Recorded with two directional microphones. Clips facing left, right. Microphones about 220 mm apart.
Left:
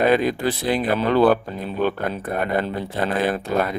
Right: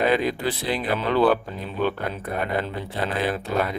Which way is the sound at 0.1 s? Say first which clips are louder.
Left 4 dB; 45° left (ahead or behind).